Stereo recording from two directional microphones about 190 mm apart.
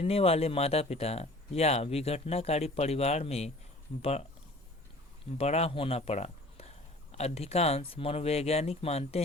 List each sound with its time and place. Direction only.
0.0 s speech: 30° left (ahead or behind)
5.4 s speech: 35° left (ahead or behind)